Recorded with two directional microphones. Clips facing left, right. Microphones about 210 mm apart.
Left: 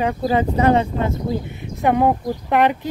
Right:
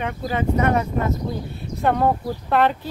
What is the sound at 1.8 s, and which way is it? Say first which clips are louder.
Speech: left 3 dB; 15° left (ahead or behind).